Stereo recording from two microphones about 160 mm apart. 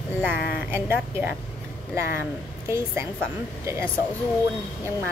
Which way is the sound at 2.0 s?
15° right (ahead or behind).